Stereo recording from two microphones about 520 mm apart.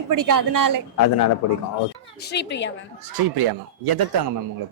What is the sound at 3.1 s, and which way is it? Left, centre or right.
Speech, right.